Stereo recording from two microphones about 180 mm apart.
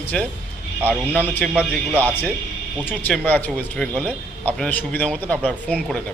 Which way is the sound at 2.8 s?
10° left (ahead or behind).